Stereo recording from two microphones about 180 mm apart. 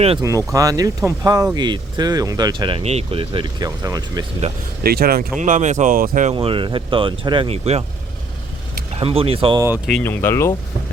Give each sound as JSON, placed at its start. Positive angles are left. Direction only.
{"t": 0.2, "sound": "speech", "side_deg": -20}
{"t": 4.8, "sound": "speech", "side_deg": -60}
{"t": 5.4, "sound": "speech", "side_deg": -45}
{"t": 6.3, "sound": "speech", "side_deg": -30}
{"t": 9.0, "sound": "speech", "side_deg": -30}
{"t": 9.6, "sound": "speech", "side_deg": -10}
{"t": 9.8, "sound": "speech", "side_deg": 5}